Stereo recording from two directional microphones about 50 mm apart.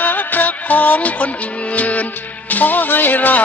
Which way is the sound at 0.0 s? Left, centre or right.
Left.